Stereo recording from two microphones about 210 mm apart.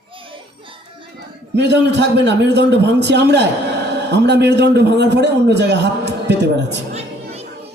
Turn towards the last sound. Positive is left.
turn(degrees=-30)  # may be behind; listen again after turning